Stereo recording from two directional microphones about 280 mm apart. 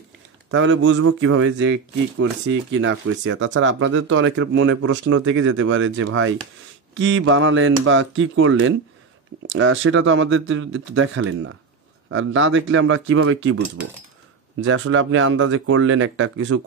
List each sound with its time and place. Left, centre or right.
0.5 s speech: right
14.7 s speech: right